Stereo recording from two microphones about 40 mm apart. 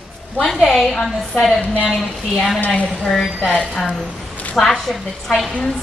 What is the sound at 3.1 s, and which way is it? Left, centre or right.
A woman's voice, centre.